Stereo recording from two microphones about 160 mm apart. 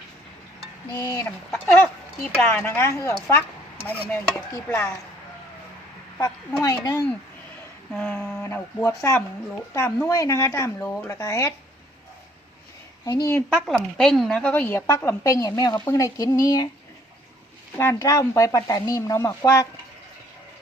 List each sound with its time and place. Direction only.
0.9 s a woman's voice: 25° left (ahead or behind)
4.1 s a woman's voice: 10° left (ahead or behind)
6.1 s speech: 15° left (ahead or behind)
7.9 s a woman's voice: 5° left (ahead or behind)
8.4 s a woman's voice: 20° left (ahead or behind)
13.1 s speech: 20° left (ahead or behind)
13.6 s a woman's voice: 5° left (ahead or behind); by 16.6 s 20° left (ahead or behind)
17.7 s speech: 20° left (ahead or behind)